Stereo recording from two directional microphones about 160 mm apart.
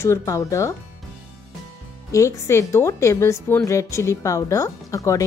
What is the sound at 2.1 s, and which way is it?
A woman's voice, 20° left (ahead or behind).